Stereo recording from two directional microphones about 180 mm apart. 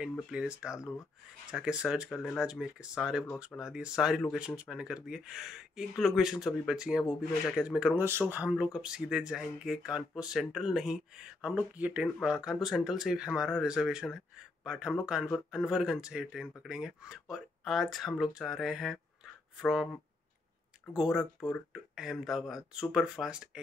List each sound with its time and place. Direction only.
0.0 s speech: 5° right (ahead or behind)
0.7 s speech: 15° left (ahead or behind)
1.5 s speech: 5° right (ahead or behind)
20.9 s speech: centre (ahead or behind)